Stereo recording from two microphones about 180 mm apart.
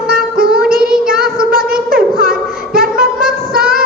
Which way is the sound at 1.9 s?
55° right (ahead or behind).